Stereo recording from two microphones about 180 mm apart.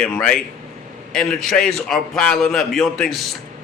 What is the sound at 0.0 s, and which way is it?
A man's voice, 5° left (ahead or behind).